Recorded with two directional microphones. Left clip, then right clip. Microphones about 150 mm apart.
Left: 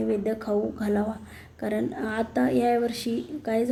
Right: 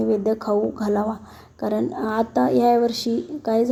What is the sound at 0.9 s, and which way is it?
Speech, 5° left (ahead or behind).